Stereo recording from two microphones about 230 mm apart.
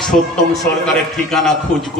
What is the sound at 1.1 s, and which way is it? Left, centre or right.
Speech, centre.